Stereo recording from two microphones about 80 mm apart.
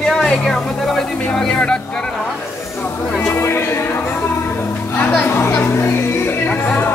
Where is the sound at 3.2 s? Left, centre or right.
Left.